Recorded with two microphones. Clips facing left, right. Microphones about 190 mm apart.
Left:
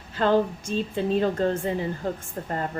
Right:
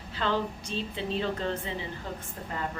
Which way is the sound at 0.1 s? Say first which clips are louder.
Left 8 dB; 45° left (ahead or behind).